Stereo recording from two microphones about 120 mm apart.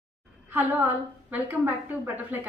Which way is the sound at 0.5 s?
15° right (ahead or behind).